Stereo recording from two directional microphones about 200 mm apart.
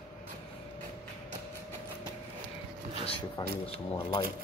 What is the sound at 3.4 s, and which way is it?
Speech, 20° left (ahead or behind).